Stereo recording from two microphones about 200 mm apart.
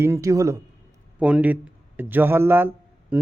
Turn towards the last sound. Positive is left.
turn(degrees=-10)  # may be behind; listen again after turning